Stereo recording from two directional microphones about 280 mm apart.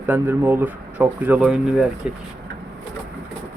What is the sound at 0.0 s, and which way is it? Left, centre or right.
Speech, centre.